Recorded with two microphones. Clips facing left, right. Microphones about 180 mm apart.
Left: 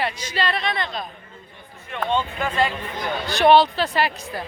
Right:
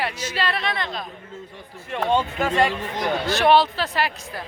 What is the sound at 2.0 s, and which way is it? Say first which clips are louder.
Speech: right 2 dB; 40° right (ahead or behind).